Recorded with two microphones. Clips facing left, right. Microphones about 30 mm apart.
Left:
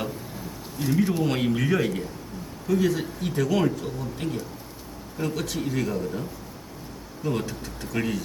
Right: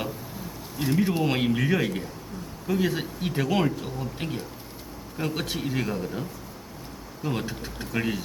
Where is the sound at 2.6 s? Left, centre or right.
Right.